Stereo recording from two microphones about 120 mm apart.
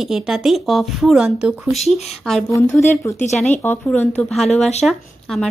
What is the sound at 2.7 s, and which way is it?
Speech, 20° left (ahead or behind).